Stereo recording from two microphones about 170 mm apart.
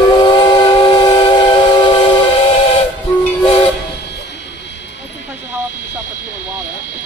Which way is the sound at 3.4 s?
35° left (ahead or behind).